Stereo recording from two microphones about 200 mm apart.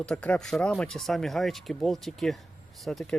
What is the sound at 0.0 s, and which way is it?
Speech, 5° left (ahead or behind).